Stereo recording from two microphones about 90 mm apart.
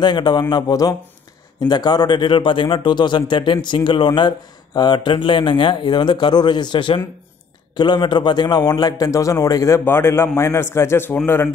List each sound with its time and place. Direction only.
0.0 s a man's voice: 55° left (ahead or behind)
9.8 s a man's voice: 25° left (ahead or behind)